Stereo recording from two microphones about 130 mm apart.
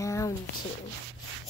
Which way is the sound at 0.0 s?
25° left (ahead or behind).